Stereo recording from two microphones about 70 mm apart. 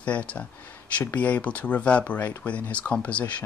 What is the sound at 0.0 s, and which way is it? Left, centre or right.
Speech, left.